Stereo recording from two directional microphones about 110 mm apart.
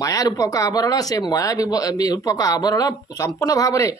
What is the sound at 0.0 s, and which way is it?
Speech, 35° left (ahead or behind).